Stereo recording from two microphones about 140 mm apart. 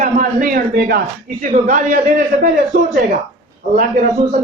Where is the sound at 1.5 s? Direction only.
65° right (ahead or behind); by 3.0 s 85° right.